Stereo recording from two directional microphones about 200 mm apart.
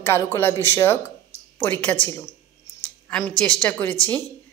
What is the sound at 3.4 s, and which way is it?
Speech, 5° left (ahead or behind).